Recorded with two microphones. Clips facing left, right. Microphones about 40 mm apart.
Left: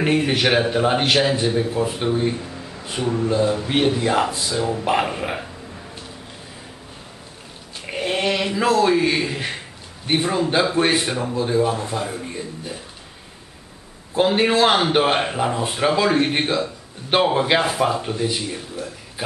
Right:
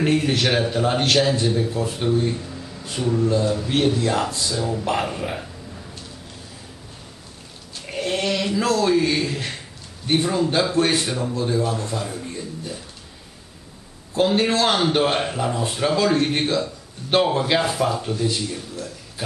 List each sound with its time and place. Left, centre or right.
0.0 s a man's voice: centre
7.8 s a man's voice: left
14.1 s a man's voice: left